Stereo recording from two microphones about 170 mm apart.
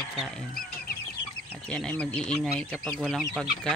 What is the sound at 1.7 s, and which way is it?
Speech, 5° left (ahead or behind).